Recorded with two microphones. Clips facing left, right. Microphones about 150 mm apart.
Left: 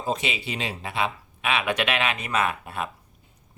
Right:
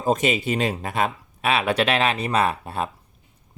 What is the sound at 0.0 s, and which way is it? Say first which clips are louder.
Speech: right 7 dB; 45° right (ahead or behind).